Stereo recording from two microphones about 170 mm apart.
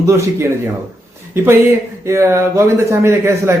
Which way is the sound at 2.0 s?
15° right (ahead or behind).